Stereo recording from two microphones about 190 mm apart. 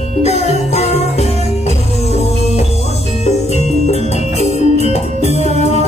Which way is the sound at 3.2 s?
35° left (ahead or behind).